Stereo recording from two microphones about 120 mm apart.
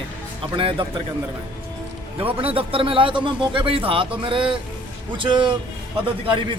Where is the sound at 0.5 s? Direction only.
50° right (ahead or behind).